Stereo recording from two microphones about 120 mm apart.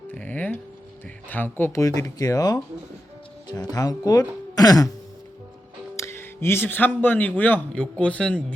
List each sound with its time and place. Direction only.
0.1 s music: 15° left (ahead or behind)
1.3 s speech: 15° left (ahead or behind); by 4.9 s 30° left (ahead or behind)
6.0 s speech: 20° left (ahead or behind)